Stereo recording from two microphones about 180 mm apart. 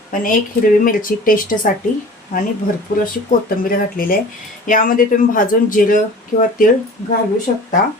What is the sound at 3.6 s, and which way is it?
Speech, 50° left (ahead or behind).